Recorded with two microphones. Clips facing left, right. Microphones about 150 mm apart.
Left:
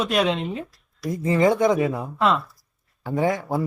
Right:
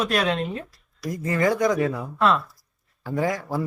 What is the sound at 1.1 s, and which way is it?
Speech, 25° left (ahead or behind).